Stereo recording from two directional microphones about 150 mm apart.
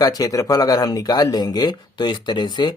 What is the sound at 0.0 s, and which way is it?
Speech, 25° left (ahead or behind).